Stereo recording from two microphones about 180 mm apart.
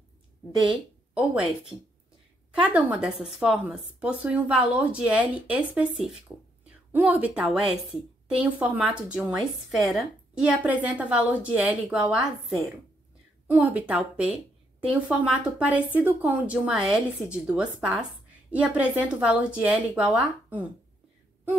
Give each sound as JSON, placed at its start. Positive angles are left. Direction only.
{"t": 0.7, "sound": "a woman's voice", "side_deg": -5}